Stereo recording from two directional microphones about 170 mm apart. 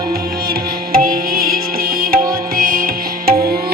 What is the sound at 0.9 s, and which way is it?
Music, 55° right (ahead or behind).